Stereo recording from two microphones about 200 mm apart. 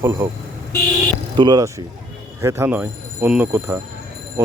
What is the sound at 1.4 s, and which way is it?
Speech, 20° right (ahead or behind).